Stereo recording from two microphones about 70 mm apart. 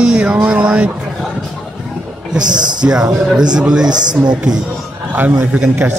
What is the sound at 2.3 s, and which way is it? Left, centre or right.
Speech, right.